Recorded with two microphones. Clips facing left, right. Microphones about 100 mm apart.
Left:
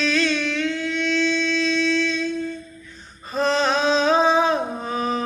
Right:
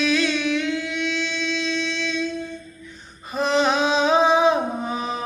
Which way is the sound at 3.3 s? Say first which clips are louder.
Even; 15° right (ahead or behind).